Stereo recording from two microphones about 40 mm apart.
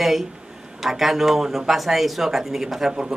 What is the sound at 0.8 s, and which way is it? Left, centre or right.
Speech, centre.